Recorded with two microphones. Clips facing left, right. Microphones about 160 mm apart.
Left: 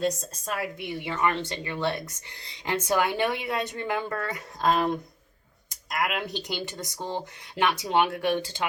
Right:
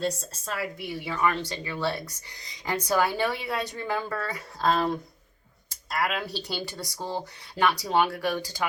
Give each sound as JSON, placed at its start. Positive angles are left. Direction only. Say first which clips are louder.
{"t": 0.0, "sound": "a woman's voice", "louder": "left 2 dB", "side_deg": 15}